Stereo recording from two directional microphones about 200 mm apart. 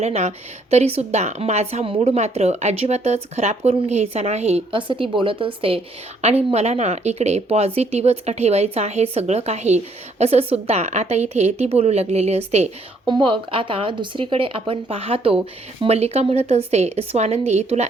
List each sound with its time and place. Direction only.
0.0 s speech: 35° right (ahead or behind)